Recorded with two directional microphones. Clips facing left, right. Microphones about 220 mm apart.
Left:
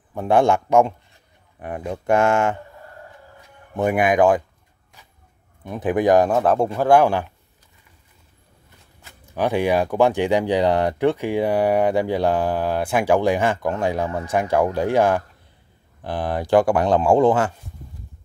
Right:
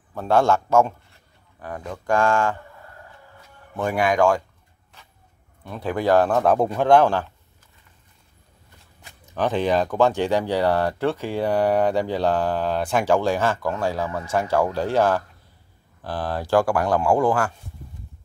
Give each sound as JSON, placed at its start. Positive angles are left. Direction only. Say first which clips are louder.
{"t": 0.1, "sound": "a man's voice", "louder": "left 2 dB", "side_deg": 15}
{"t": 3.7, "sound": "speech", "louder": "left 3 dB", "side_deg": 20}
{"t": 5.6, "sound": "speech", "louder": "left 5 dB", "side_deg": 20}
{"t": 6.3, "sound": "speech", "louder": "left 1 dB", "side_deg": 0}
{"t": 9.3, "sound": "speech", "louder": "left 2 dB", "side_deg": 10}